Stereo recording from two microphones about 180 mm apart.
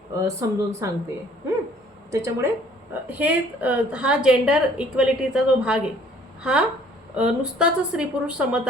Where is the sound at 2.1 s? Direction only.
15° right (ahead or behind).